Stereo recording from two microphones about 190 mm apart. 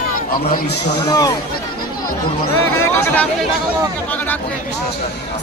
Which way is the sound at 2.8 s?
15° left (ahead or behind).